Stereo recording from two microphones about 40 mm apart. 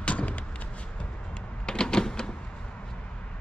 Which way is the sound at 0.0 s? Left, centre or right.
Left.